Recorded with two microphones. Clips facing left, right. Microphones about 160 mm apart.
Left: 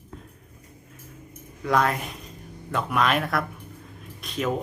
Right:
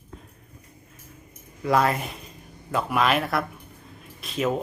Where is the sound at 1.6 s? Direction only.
5° right (ahead or behind).